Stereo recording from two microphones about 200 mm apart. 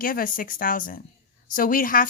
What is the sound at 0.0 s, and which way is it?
Speech, 45° left (ahead or behind).